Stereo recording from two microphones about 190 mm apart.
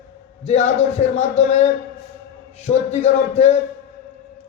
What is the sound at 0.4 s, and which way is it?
A man's voice, 35° left (ahead or behind).